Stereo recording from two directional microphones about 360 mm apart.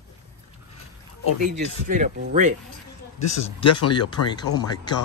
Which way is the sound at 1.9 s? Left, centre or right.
Right.